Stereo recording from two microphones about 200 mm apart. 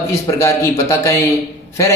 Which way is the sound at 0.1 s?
15° left (ahead or behind).